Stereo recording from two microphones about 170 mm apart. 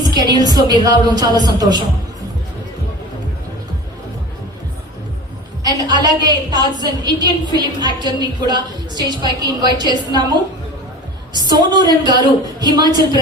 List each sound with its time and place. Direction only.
0.1 s a woman's voice: 25° right (ahead or behind)
5.6 s a woman's voice: 25° right (ahead or behind)
11.3 s a woman's voice: 25° right (ahead or behind)